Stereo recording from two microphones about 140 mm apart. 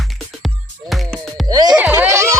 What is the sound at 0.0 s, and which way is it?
Music, centre (ahead or behind).